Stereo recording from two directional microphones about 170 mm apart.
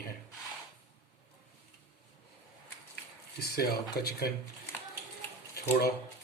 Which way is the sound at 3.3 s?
70° left (ahead or behind).